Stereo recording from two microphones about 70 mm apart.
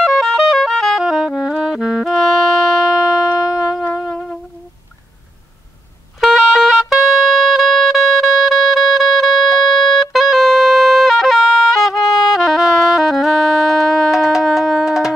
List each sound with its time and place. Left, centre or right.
0.0 s music: centre
3.9 s music: centre
6.2 s music: centre